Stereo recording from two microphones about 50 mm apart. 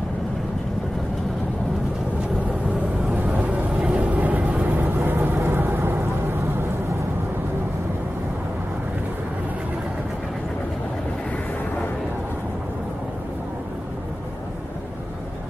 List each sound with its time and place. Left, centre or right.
3.1 s vehicle: right
4.6 s vehicle: right